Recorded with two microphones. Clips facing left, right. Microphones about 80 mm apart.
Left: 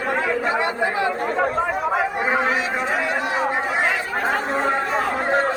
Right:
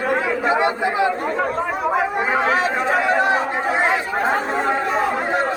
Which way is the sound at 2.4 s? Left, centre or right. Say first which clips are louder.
Right 3 dB; right.